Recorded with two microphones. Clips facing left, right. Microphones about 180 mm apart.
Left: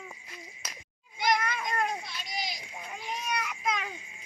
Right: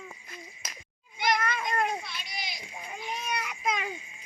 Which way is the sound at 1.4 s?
10° left (ahead or behind).